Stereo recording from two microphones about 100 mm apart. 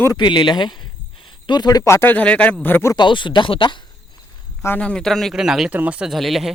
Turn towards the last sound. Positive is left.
turn(degrees=0)  # may be behind; listen again after turning